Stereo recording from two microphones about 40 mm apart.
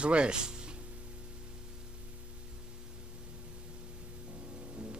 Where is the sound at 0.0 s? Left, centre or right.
Right.